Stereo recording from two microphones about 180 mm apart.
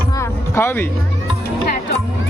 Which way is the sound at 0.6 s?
15° left (ahead or behind).